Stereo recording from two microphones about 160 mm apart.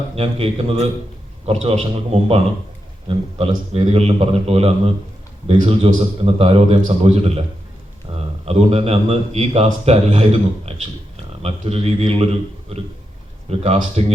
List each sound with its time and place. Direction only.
0.2 s a man's voice: 35° right (ahead or behind)
8.1 s a sound: 35° right (ahead or behind)
8.4 s a man's voice: 40° right (ahead or behind)